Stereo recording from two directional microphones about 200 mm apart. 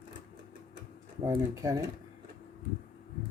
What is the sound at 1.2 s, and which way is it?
Speech, 15° right (ahead or behind).